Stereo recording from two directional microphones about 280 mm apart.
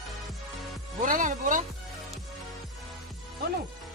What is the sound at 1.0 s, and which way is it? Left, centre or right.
Music, right.